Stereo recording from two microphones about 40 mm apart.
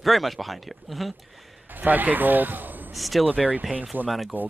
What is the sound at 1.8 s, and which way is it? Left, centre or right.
Speech, right.